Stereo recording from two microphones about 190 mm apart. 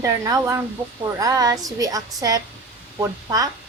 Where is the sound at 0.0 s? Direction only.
15° right (ahead or behind).